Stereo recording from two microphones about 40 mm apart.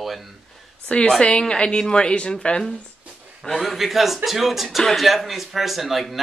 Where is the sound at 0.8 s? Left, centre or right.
Left.